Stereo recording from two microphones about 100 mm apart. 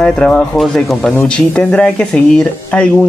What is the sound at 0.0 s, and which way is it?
Speech, 5° left (ahead or behind).